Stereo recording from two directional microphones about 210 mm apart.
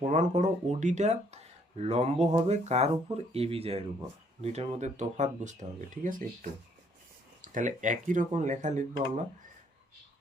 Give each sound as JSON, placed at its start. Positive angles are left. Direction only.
{"t": 0.1, "sound": "speech", "side_deg": -35}